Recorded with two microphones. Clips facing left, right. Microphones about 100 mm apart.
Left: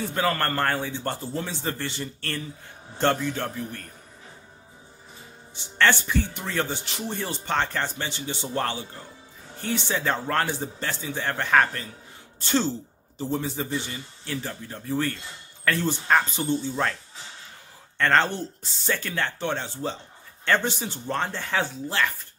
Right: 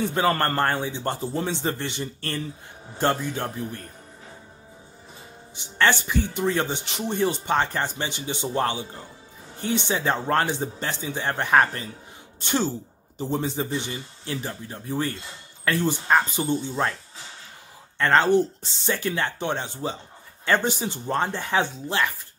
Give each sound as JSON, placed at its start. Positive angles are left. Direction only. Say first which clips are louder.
{"t": 0.1, "sound": "speech", "louder": "right 3 dB", "side_deg": -20}
{"t": 5.6, "sound": "speech", "louder": "even", "side_deg": -15}
{"t": 18.1, "sound": "speech", "louder": "right 5 dB", "side_deg": -5}
{"t": 18.4, "sound": "speech", "louder": "right 8 dB", "side_deg": -20}